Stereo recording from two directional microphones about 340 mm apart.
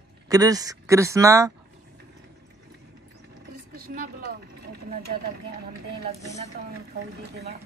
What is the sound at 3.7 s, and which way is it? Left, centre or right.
Speech, right.